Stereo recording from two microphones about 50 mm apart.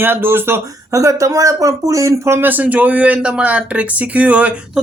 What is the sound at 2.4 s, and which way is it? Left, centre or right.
Speech, right.